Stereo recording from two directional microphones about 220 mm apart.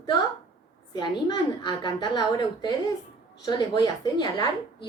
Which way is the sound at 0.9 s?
20° left (ahead or behind).